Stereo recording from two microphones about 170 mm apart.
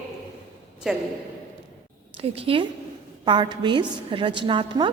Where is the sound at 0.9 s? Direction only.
Centre (ahead or behind).